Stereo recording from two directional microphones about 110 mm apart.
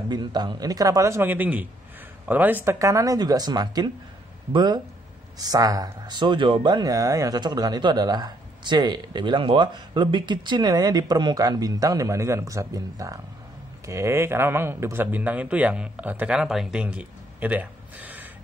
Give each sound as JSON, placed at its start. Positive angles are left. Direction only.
{"t": 0.1, "sound": "speech", "side_deg": -40}